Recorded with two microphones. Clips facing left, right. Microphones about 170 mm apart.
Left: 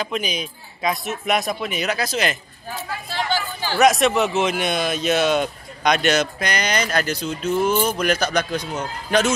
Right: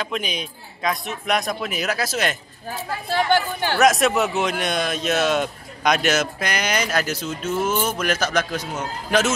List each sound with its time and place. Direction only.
0.0 s speech: centre (ahead or behind)
3.1 s speech: 60° right (ahead or behind)
3.7 s speech: centre (ahead or behind)